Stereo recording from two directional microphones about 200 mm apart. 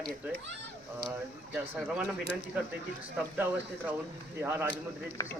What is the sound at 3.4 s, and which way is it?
A man's voice, 10° right (ahead or behind).